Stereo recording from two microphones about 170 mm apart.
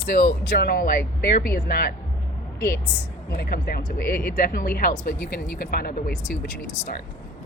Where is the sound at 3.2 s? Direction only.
65° left (ahead or behind).